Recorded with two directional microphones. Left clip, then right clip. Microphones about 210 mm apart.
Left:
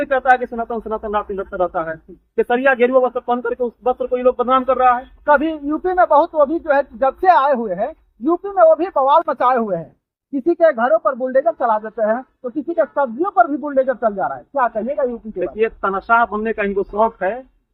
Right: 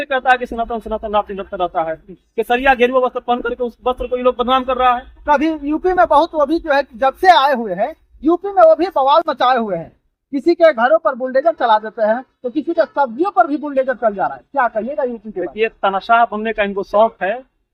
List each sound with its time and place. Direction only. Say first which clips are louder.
0.0 s a man's voice: even; 25° right (ahead or behind)
5.2 s a man's voice: even; 5° right (ahead or behind)
15.4 s a man's voice: right 2 dB; 30° right (ahead or behind)